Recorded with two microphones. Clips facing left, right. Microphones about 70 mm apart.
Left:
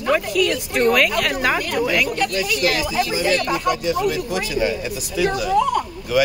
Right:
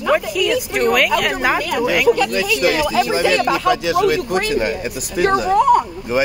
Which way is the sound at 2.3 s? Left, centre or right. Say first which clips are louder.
Right 4 dB; right.